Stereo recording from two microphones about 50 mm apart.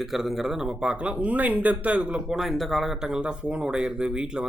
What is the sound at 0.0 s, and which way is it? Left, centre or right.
A man's voice, centre.